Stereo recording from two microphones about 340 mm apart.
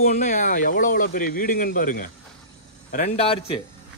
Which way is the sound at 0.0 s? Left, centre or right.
Left.